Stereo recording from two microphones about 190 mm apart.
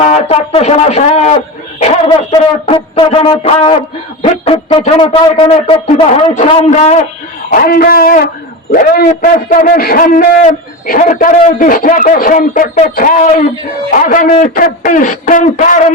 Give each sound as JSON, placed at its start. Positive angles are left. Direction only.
{"t": 0.0, "sound": "speech", "side_deg": 30}
{"t": 6.3, "sound": "speech", "side_deg": 40}
{"t": 7.5, "sound": "a man's voice", "side_deg": 50}